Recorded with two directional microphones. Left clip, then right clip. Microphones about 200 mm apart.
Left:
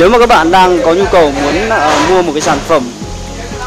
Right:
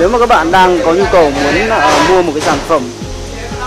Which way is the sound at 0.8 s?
5° left (ahead or behind).